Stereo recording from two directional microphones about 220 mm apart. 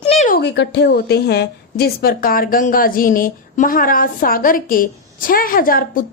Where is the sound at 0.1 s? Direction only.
30° left (ahead or behind).